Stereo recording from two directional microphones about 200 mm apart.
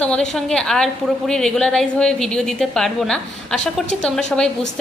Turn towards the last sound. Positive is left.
turn(degrees=5)  # may be behind; listen again after turning